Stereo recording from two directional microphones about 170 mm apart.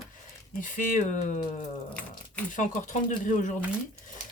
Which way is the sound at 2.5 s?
45° left (ahead or behind).